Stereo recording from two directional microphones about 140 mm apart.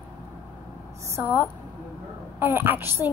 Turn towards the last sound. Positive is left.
turn(degrees=-15)  # may be behind; listen again after turning